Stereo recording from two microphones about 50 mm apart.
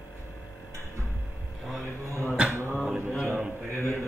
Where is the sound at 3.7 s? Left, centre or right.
Left.